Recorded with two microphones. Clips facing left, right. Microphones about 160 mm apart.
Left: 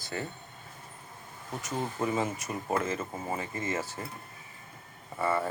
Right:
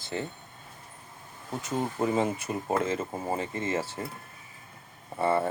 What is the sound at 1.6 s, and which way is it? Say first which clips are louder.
Speech: right 3 dB; 30° right (ahead or behind).